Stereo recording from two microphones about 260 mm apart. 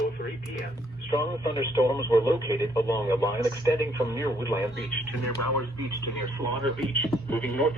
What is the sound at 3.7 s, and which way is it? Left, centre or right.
Speech, centre.